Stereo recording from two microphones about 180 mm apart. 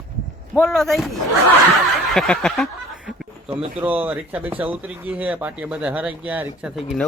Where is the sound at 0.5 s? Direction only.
Centre (ahead or behind).